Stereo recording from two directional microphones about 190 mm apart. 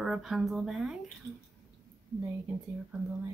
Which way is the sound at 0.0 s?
Centre (ahead or behind).